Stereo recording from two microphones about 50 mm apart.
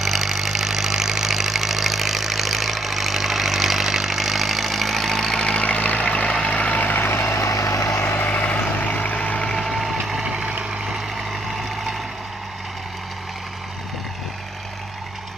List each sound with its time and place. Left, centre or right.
0.0 s engine: centre
5.4 s vehicle: left
8.2 s vehicle: left
9.5 s vehicle: centre
10.2 s vehicle: centre